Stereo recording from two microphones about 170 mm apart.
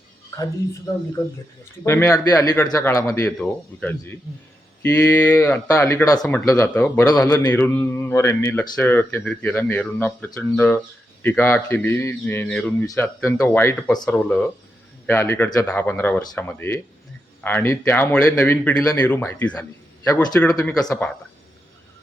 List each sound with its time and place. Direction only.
1.8 s a man's voice: 15° left (ahead or behind)
12.8 s speech: 20° left (ahead or behind)
13.1 s a man's voice: 5° left (ahead or behind)
20.7 s speech: 20° left (ahead or behind)